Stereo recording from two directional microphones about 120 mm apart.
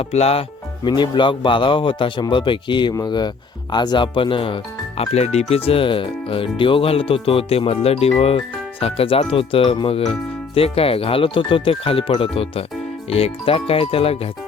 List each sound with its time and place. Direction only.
0.0 s speech: 60° left (ahead or behind)
0.9 s speech: 40° left (ahead or behind)
5.1 s speech: 65° left (ahead or behind)